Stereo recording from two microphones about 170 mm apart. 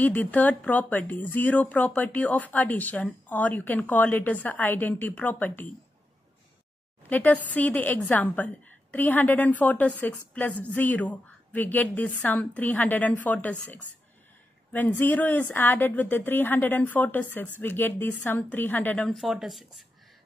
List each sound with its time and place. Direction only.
0.0 s a woman's voice: 10° left (ahead or behind)
7.1 s a woman's voice: 10° left (ahead or behind)